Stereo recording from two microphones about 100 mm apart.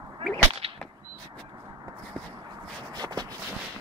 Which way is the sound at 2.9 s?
45° right (ahead or behind).